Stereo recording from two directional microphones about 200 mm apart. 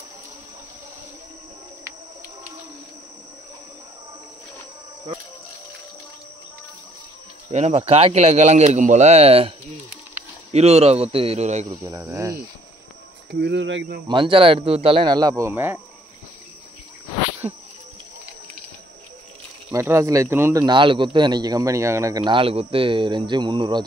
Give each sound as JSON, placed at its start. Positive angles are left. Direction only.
{"t": 7.4, "sound": "speech", "side_deg": -30}
{"t": 11.6, "sound": "speech", "side_deg": -15}
{"t": 13.3, "sound": "speech", "side_deg": -60}
{"t": 14.0, "sound": "speech", "side_deg": -25}
{"t": 17.4, "sound": "insect", "side_deg": -25}
{"t": 19.7, "sound": "speech", "side_deg": -15}